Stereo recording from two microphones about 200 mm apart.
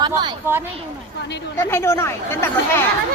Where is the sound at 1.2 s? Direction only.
60° left (ahead or behind).